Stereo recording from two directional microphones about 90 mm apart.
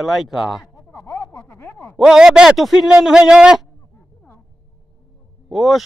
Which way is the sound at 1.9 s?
5° right (ahead or behind).